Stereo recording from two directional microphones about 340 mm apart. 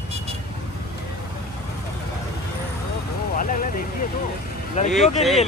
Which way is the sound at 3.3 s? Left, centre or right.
Left.